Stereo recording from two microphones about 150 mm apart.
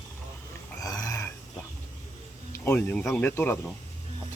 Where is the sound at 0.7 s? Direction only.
20° left (ahead or behind).